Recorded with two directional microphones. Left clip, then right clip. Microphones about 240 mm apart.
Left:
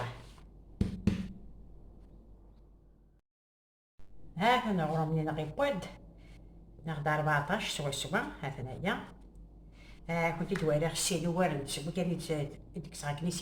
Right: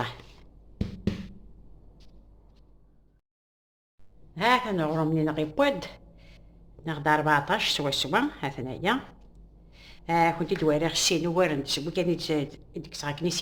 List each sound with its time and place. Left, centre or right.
4.4 s speech: right